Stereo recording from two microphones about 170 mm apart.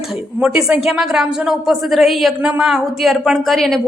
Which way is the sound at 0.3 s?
5° right (ahead or behind).